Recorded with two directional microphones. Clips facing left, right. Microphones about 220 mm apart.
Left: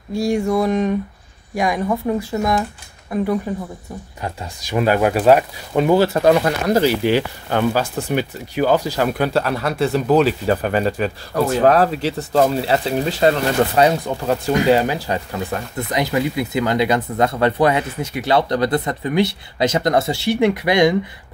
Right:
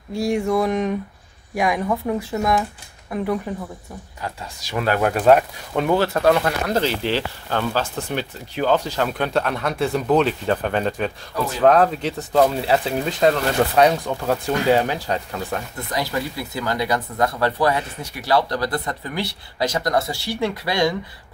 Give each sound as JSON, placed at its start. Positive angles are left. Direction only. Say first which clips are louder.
{"t": 0.1, "sound": "speech", "louder": "left 2 dB", "side_deg": 0}
{"t": 4.2, "sound": "speech", "louder": "left 2 dB", "side_deg": 20}
{"t": 15.9, "sound": "speech", "louder": "left 5 dB", "side_deg": 20}